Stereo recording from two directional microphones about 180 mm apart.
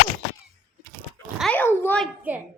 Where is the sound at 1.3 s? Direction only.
5° left (ahead or behind).